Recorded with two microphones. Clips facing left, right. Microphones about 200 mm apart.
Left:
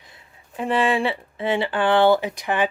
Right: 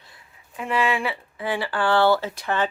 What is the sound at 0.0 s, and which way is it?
Speech, 20° left (ahead or behind).